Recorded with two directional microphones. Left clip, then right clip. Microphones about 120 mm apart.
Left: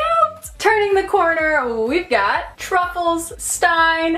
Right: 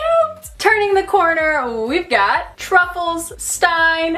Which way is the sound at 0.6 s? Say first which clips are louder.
Right 1 dB; 30° right (ahead or behind).